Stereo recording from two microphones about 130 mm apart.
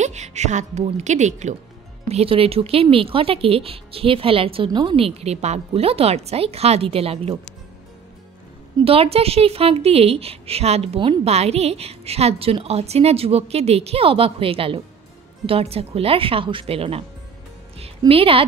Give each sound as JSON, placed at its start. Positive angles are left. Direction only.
{"t": 0.0, "sound": "speech", "side_deg": -60}
{"t": 2.0, "sound": "speech", "side_deg": -50}
{"t": 8.7, "sound": "speech", "side_deg": -45}
{"t": 17.7, "sound": "music", "side_deg": -50}